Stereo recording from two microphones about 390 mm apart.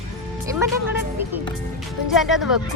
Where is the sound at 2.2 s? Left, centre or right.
Centre.